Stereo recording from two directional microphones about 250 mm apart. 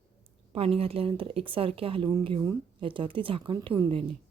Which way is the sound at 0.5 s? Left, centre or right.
Right.